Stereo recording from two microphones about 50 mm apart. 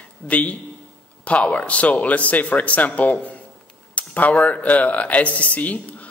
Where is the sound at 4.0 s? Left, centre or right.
Left.